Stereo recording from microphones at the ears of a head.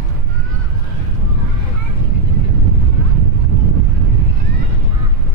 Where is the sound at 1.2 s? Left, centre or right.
Right.